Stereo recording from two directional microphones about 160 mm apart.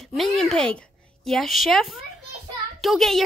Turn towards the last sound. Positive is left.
turn(degrees=0)  # may be behind; listen again after turning